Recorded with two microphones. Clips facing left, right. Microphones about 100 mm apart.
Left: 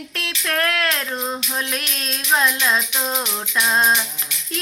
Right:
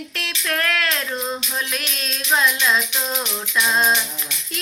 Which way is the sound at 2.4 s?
45° left (ahead or behind).